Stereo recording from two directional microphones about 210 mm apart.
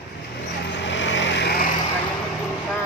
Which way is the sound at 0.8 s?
60° left (ahead or behind).